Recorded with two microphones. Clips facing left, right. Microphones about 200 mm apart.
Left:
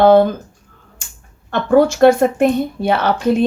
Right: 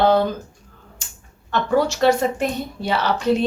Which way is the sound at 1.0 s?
50° left (ahead or behind).